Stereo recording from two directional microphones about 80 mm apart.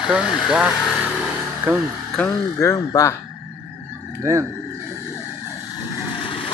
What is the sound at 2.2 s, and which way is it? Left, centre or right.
Speech, centre.